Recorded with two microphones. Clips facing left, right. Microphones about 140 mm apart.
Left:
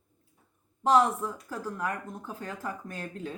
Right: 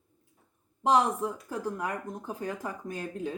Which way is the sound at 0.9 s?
15° right (ahead or behind).